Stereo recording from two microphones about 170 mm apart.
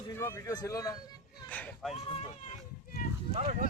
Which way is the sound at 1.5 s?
10° left (ahead or behind).